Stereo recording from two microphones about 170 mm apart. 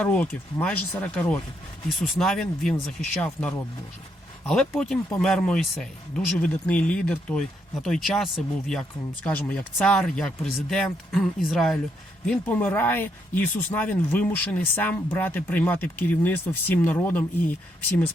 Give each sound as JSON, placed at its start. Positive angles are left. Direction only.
{"t": 0.0, "sound": "speech", "side_deg": 5}